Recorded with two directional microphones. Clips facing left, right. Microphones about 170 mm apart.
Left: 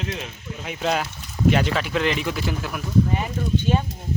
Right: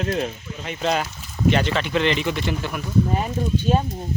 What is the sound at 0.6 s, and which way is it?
Speech, centre (ahead or behind).